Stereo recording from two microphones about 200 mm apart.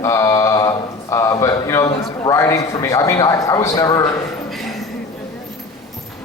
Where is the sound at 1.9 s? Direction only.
15° left (ahead or behind).